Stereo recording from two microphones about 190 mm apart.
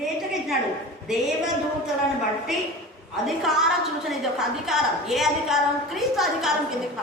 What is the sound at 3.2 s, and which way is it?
A woman's voice, centre (ahead or behind).